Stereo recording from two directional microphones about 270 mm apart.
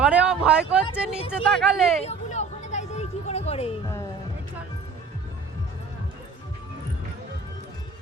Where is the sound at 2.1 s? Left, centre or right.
Left.